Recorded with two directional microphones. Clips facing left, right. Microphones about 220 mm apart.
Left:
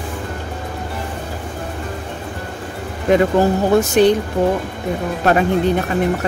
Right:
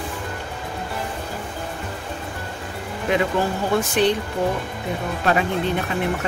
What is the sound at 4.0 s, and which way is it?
Speech, 45° left (ahead or behind).